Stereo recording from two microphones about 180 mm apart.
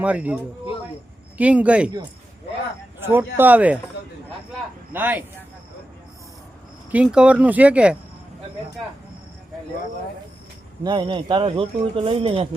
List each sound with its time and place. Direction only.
0.0 s speech: 10° right (ahead or behind)
1.4 s speech: 5° right (ahead or behind)
3.0 s speech: 10° right (ahead or behind)
4.9 s speech: 10° right (ahead or behind)
6.9 s speech: 5° right (ahead or behind)
10.8 s a man's voice: 25° right (ahead or behind)